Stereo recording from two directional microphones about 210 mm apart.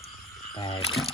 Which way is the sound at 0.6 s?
25° left (ahead or behind).